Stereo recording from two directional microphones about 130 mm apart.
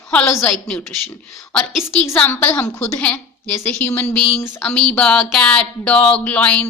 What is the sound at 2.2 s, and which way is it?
A woman's voice, 15° left (ahead or behind).